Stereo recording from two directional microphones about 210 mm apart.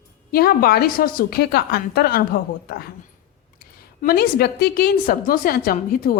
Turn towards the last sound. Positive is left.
turn(degrees=45)  # may be behind; listen again after turning